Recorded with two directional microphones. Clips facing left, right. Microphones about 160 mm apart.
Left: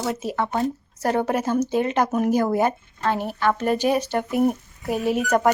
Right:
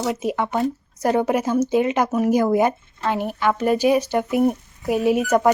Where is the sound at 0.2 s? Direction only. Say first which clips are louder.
Right 2 dB; 15° right (ahead or behind).